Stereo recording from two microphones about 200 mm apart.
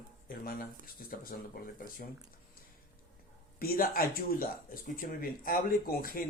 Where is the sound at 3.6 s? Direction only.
50° left (ahead or behind).